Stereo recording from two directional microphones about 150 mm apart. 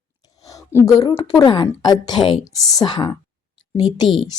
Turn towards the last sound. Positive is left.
turn(degrees=0)  # may be behind; listen again after turning